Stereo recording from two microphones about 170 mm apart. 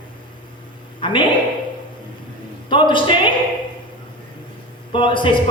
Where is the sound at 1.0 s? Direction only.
30° left (ahead or behind).